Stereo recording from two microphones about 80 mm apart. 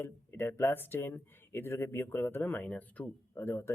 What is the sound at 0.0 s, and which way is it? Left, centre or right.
Speech, left.